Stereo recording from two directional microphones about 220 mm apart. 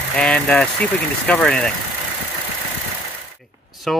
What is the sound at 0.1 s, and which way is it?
Speech, 5° left (ahead or behind).